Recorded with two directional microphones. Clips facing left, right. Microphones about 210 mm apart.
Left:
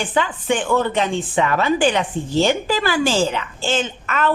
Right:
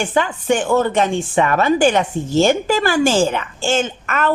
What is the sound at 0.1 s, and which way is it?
Speech, 45° right (ahead or behind).